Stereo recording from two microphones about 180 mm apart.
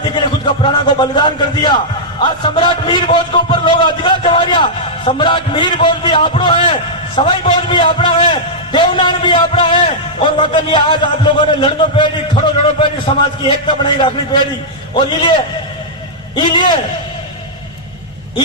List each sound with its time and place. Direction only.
0.0 s a man's voice: 25° left (ahead or behind)
16.3 s a man's voice: 25° left (ahead or behind)